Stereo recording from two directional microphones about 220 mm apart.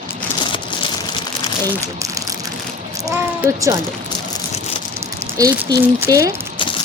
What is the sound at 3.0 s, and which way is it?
Speech, 15° right (ahead or behind).